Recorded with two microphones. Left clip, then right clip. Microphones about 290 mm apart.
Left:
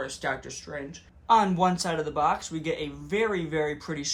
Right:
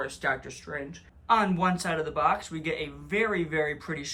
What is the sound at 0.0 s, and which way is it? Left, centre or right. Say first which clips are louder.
Speech: right 1 dB; centre.